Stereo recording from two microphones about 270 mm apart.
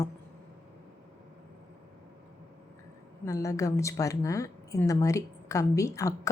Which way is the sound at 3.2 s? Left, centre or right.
Centre.